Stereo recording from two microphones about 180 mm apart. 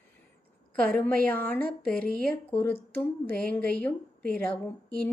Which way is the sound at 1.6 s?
50° right (ahead or behind).